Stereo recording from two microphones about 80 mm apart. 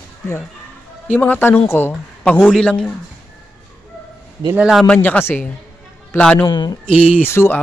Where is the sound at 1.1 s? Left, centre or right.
Left.